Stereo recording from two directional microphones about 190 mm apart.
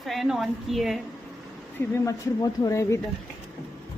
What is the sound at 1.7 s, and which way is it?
Speech, 15° left (ahead or behind).